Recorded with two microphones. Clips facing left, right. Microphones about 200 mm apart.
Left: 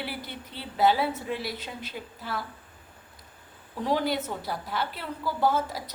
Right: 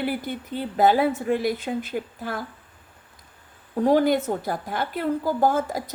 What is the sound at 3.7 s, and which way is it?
A woman's voice, 50° right (ahead or behind).